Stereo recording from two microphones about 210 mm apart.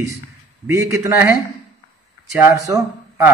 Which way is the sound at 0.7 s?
15° right (ahead or behind).